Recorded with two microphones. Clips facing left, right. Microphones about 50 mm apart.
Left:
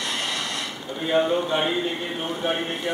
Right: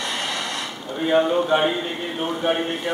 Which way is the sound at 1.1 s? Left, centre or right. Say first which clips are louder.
Right 3 dB; centre.